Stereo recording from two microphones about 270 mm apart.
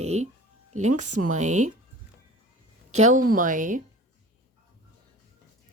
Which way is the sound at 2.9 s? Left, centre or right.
Right.